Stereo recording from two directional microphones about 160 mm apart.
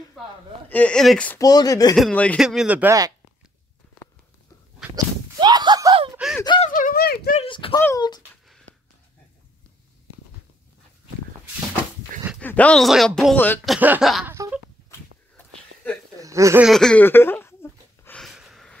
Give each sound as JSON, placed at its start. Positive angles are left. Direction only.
{"t": 0.7, "sound": "speech", "side_deg": 10}
{"t": 1.4, "sound": "speech", "side_deg": 25}
{"t": 2.0, "sound": "speech", "side_deg": 5}
{"t": 4.9, "sound": "speech", "side_deg": -25}
{"t": 6.1, "sound": "speech", "side_deg": -5}
{"t": 6.7, "sound": "speech", "side_deg": 60}
{"t": 7.3, "sound": "speech", "side_deg": 35}
{"t": 7.7, "sound": "speech", "side_deg": 20}
{"t": 12.4, "sound": "speech", "side_deg": 10}
{"t": 13.7, "sound": "speech", "side_deg": -10}
{"t": 16.2, "sound": "speech", "side_deg": -20}
{"t": 16.6, "sound": "a sound", "side_deg": 5}
{"t": 18.2, "sound": "a sound", "side_deg": 0}